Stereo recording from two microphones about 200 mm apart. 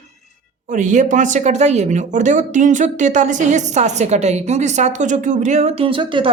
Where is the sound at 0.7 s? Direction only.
40° right (ahead or behind).